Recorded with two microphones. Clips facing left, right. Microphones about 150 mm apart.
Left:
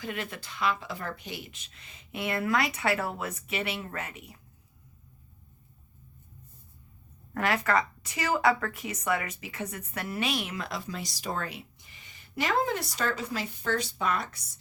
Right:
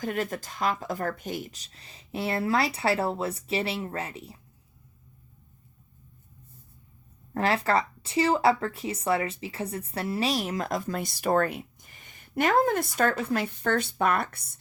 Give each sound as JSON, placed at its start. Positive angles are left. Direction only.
{"t": 0.0, "sound": "speech", "side_deg": -45}
{"t": 7.3, "sound": "speech", "side_deg": -30}